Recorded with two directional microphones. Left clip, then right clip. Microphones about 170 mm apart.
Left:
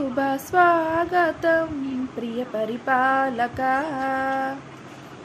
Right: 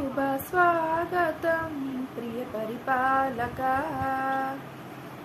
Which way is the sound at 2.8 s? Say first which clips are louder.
Left 4 dB; 50° left (ahead or behind).